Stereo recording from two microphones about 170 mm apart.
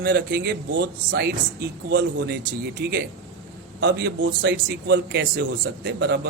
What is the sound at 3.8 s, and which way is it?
A man's voice, 90° right.